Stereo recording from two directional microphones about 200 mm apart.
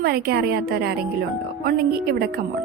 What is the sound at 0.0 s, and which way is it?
Speech, 55° right (ahead or behind).